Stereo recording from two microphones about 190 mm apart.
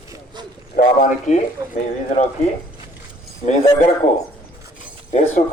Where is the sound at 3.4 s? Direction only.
35° left (ahead or behind).